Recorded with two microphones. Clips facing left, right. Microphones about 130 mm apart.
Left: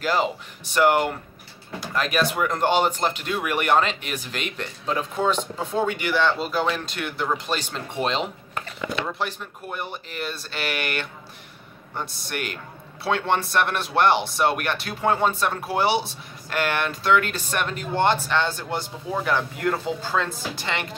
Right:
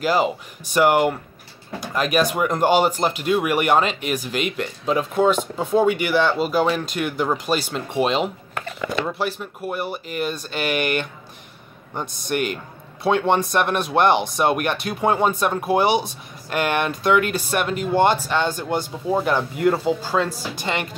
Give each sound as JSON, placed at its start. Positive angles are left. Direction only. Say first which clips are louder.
{"t": 0.0, "sound": "speech", "louder": "right 4 dB", "side_deg": -10}